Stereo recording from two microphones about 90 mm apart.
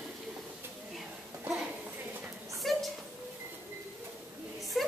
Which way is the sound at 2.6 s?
Centre (ahead or behind).